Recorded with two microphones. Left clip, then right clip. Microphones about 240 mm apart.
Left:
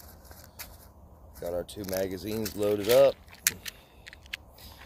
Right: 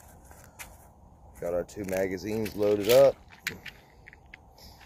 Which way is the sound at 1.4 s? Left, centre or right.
Centre.